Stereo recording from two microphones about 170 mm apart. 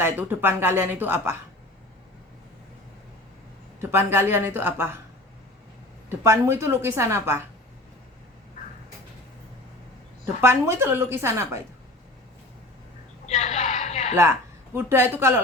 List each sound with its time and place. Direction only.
0.0 s speech: 10° right (ahead or behind)
3.8 s speech: 15° right (ahead or behind)
6.1 s speech: 15° right (ahead or behind)
10.5 s speech: 15° right (ahead or behind)
13.2 s a sound: 40° left (ahead or behind)
14.2 s speech: 15° right (ahead or behind)